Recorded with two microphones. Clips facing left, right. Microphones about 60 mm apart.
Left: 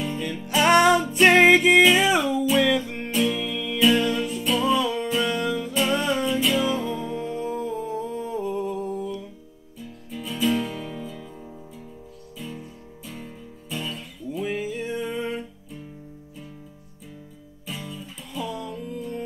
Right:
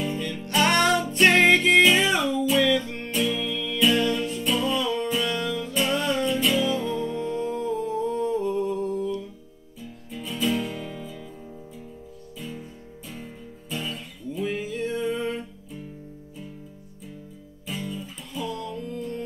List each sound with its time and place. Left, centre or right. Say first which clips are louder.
0.0 s music: even; centre
12.4 s music: left 1 dB; centre
17.6 s music: right 3 dB; centre